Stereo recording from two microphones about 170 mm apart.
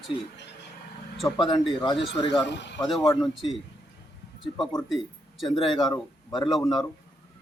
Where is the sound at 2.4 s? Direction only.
90° left.